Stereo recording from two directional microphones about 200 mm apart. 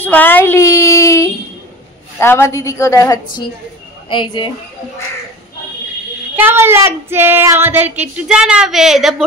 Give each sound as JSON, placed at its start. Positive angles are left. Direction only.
{"t": 0.0, "sound": "a child's voice", "side_deg": 10}
{"t": 6.3, "sound": "child singing", "side_deg": -10}